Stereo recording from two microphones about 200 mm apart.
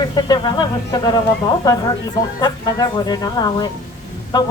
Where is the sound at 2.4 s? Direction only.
20° left (ahead or behind).